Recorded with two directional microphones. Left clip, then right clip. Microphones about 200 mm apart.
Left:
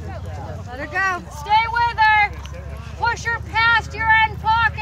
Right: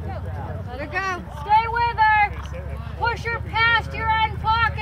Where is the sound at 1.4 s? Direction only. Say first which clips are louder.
Left 1 dB; 45° right (ahead or behind).